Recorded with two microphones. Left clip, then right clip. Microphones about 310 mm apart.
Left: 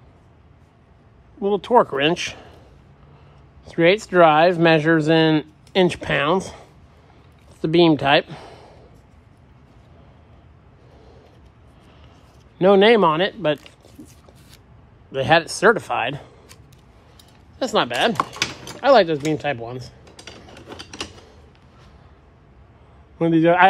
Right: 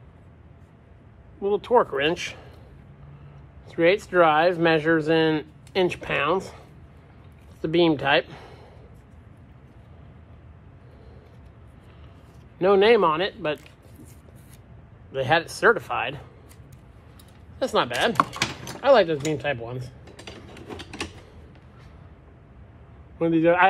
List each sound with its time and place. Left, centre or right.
1.4 s speech: left
3.6 s speech: left
7.6 s speech: left
12.5 s speech: left
15.0 s speech: left
17.6 s speech: left
18.1 s typing: centre
18.8 s speech: left
20.2 s a sound: centre
23.1 s speech: left